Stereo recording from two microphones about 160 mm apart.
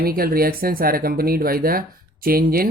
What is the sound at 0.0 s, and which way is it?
Speech, 70° right (ahead or behind).